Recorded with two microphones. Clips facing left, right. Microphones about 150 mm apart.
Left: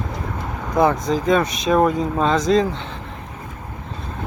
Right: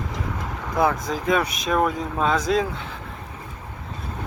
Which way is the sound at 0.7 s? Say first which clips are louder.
Left 5 dB; 5° right (ahead or behind).